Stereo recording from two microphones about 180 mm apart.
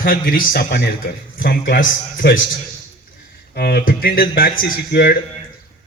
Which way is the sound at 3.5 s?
60° left (ahead or behind).